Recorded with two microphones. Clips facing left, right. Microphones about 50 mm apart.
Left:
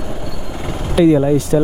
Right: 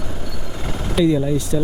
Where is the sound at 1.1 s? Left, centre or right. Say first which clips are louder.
Left 8 dB; left.